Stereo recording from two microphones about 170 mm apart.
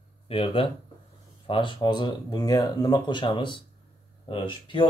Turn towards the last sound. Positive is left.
turn(degrees=30)  # may be behind; listen again after turning